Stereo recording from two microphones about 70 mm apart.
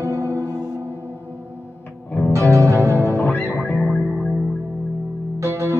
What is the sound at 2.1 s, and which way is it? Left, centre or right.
Music, left.